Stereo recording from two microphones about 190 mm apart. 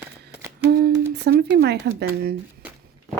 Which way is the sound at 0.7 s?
60° right (ahead or behind).